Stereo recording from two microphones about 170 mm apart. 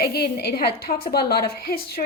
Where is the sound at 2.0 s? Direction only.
50° left (ahead or behind).